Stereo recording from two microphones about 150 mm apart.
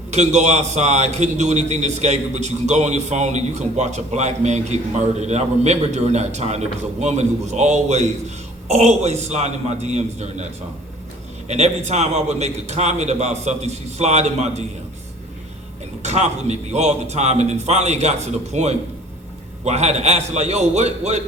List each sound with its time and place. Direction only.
0.1 s a man's voice: 50° right (ahead or behind)
11.4 s a man's voice: 45° right (ahead or behind)
16.0 s a man's voice: 50° right (ahead or behind)